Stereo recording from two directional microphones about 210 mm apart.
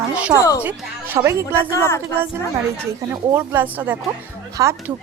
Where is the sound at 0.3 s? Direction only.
15° left (ahead or behind).